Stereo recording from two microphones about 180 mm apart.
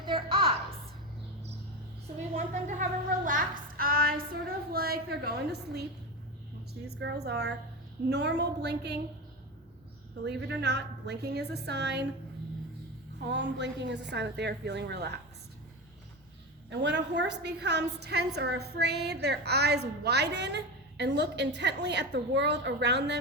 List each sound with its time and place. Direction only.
0.0 s a sound: 30° right (ahead or behind)
2.3 s a sound: 45° right (ahead or behind); by 5.8 s 65° right (ahead or behind)
6.8 s a woman's voice: 65° right (ahead or behind)
10.2 s a woman's voice: 70° right (ahead or behind)
13.2 s a woman's voice: 75° right (ahead or behind)
16.6 s a woman's voice: 75° right (ahead or behind)